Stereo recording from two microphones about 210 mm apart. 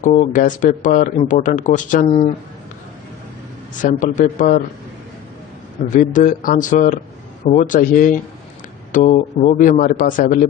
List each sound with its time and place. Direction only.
0.0 s speech: 35° left (ahead or behind)
3.8 s speech: 35° left (ahead or behind)
5.9 s speech: 40° left (ahead or behind)